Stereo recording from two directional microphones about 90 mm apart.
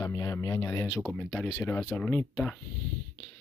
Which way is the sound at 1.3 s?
15° left (ahead or behind).